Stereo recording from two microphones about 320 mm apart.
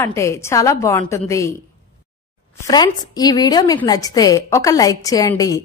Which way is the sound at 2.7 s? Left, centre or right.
Centre.